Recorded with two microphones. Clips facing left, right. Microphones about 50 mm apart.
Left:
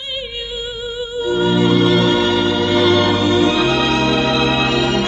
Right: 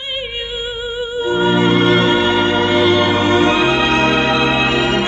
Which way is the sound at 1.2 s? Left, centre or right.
Right.